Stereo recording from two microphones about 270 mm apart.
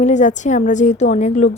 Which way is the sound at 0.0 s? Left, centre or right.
Left.